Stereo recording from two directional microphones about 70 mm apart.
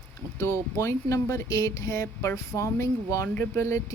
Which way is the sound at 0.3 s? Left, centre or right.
Left.